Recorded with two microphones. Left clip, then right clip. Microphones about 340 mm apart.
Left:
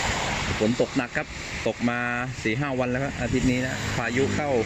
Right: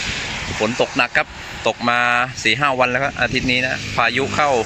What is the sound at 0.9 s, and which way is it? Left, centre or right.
Speech, centre.